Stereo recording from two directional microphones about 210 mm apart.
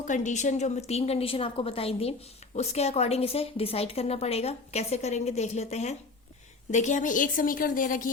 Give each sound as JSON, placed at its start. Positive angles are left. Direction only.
{"t": 0.0, "sound": "a woman's voice", "side_deg": 35}